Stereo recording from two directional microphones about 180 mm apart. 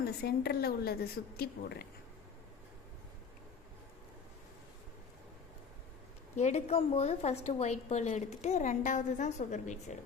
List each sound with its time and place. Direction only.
0.0 s a woman's voice: 60° left (ahead or behind)
6.3 s a woman's voice: 40° left (ahead or behind)